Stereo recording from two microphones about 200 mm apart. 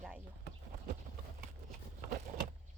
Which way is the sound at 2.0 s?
45° right (ahead or behind).